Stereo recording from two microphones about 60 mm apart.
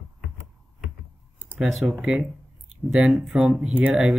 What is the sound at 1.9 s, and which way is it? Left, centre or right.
Speech, centre.